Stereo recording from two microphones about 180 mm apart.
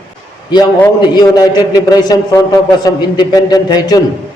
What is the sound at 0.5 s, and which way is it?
A man's voice, 20° left (ahead or behind).